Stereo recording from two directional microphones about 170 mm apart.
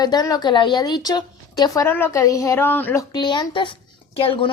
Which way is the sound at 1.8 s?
10° left (ahead or behind).